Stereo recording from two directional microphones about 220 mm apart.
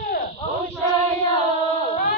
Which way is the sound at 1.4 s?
30° right (ahead or behind).